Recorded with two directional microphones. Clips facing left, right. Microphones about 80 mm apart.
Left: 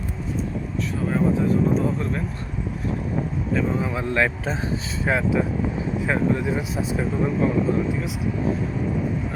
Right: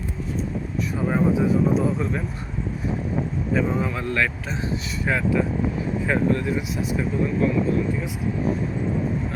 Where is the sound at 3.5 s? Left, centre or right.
Centre.